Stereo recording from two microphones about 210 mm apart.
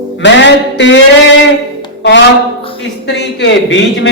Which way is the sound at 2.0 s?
55° left (ahead or behind).